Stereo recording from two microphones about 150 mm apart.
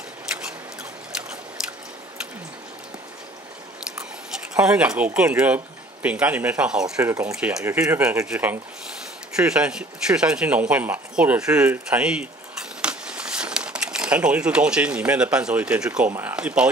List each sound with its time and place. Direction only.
4.6 s speech: 5° right (ahead or behind)
7.0 s speech: 20° right (ahead or behind)
7.2 s speech: 5° right (ahead or behind)